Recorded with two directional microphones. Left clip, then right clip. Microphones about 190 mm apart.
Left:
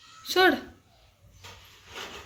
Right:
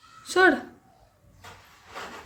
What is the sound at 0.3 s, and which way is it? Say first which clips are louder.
Speech: right 2 dB; 5° right (ahead or behind).